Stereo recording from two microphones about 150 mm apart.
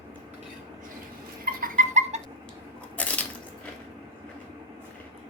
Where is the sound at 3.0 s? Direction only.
10° left (ahead or behind).